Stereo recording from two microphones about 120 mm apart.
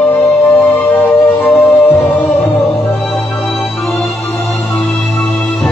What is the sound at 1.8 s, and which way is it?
Music, 15° left (ahead or behind).